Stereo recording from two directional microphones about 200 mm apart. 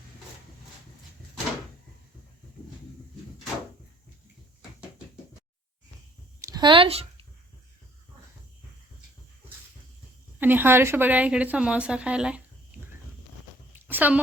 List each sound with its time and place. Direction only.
6.4 s speech: 20° right (ahead or behind)
10.4 s a woman's voice: 10° right (ahead or behind)
13.7 s a sound: 10° right (ahead or behind)